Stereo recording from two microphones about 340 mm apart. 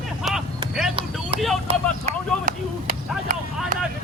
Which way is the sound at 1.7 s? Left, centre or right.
Right.